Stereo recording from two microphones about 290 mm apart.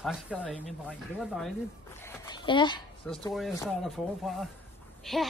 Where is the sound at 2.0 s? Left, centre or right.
Centre.